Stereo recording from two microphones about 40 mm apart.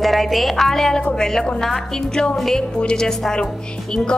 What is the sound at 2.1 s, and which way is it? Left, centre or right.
A woman's voice, centre.